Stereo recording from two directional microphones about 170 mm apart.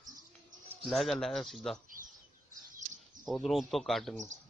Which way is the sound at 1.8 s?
55° right (ahead or behind).